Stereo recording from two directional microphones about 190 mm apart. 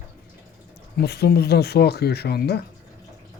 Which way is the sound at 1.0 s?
60° left (ahead or behind).